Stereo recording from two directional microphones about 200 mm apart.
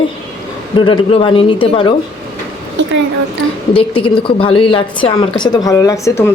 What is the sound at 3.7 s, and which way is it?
Speech, 25° left (ahead or behind).